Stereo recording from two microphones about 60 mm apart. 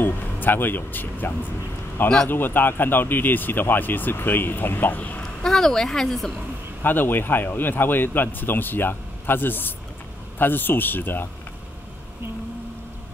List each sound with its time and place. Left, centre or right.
0.0 s speech: left
5.4 s a woman's voice: centre
6.8 s speech: left